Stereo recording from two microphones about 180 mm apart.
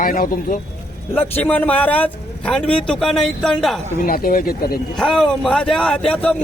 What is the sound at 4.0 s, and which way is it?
Speech, 50° left (ahead or behind).